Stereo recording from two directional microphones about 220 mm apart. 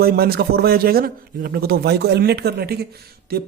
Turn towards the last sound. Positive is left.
turn(degrees=-45)  # may be behind; listen again after turning